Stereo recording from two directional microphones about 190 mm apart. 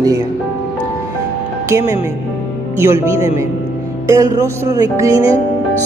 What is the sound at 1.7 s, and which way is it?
Speech, 15° right (ahead or behind).